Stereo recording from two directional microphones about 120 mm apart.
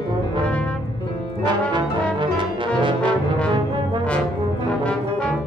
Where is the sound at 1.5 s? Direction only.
40° right (ahead or behind).